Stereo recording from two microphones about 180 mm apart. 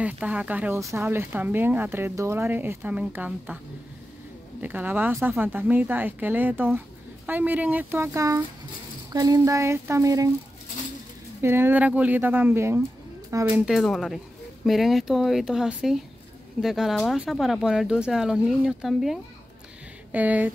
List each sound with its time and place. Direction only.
0.0 s speech: 5° right (ahead or behind)
4.6 s speech: 10° right (ahead or behind)
11.4 s speech: 10° right (ahead or behind)
13.7 s speech: centre (ahead or behind)